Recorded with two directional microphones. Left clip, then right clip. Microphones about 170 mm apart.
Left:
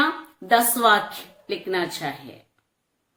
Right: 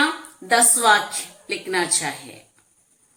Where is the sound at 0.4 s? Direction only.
50° left (ahead or behind).